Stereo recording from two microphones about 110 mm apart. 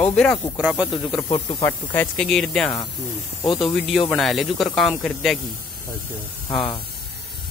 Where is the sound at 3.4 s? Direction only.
50° left (ahead or behind).